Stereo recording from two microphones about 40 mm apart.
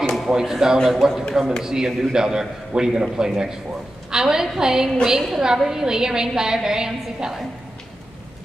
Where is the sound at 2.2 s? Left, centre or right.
Centre.